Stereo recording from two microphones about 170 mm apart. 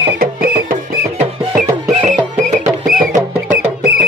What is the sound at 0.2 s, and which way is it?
Music, 60° right (ahead or behind).